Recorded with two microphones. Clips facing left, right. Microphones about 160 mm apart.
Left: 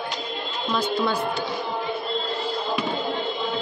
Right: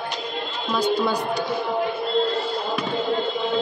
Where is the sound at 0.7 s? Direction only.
10° right (ahead or behind).